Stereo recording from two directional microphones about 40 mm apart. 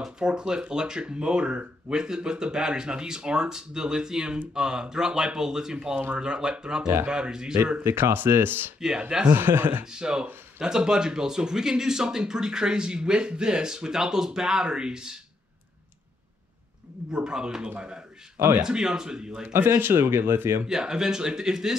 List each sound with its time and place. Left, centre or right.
0.2 s speech: right
7.8 s speech: right
8.7 s speech: centre
9.3 s speech: right
9.8 s speech: right
17.1 s speech: centre
19.5 s speech: right
20.6 s speech: centre